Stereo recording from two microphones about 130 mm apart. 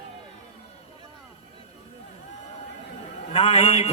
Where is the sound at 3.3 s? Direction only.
50° left (ahead or behind).